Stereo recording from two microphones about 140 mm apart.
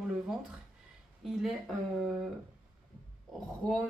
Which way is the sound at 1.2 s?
Centre (ahead or behind).